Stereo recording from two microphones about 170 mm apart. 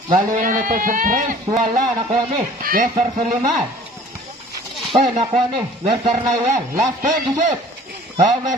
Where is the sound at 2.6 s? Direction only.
55° right (ahead or behind).